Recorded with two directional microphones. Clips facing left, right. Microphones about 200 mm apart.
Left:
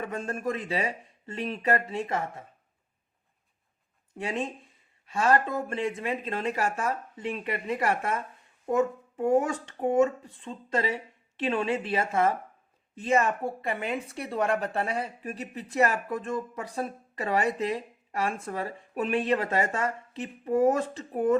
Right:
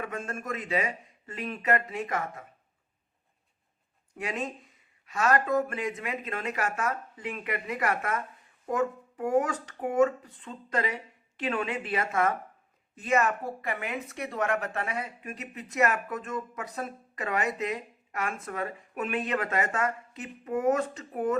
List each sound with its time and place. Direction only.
0.0 s a woman's voice: 30° left (ahead or behind)
4.1 s a woman's voice: 30° left (ahead or behind)